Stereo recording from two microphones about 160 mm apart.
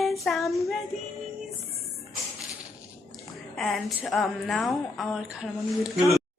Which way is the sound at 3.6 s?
Centre (ahead or behind).